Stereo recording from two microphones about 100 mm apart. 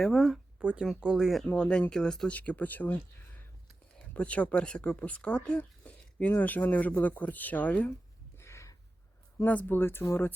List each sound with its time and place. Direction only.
0.0 s speech: centre (ahead or behind)
0.6 s speech: 10° right (ahead or behind)
1.5 s speech: 10° left (ahead or behind)
8.4 s a sound: 30° left (ahead or behind)
9.4 s speech: 20° left (ahead or behind)